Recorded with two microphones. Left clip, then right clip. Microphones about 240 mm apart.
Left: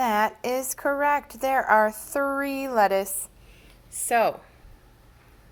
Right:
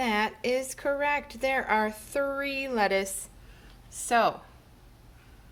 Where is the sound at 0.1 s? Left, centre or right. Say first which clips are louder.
Left 3 dB; centre.